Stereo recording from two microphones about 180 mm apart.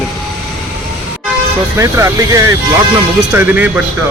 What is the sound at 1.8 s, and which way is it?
Speech, 15° right (ahead or behind).